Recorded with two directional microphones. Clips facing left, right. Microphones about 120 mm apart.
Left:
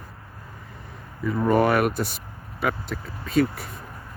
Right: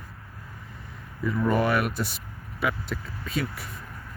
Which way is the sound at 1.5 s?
45° left (ahead or behind).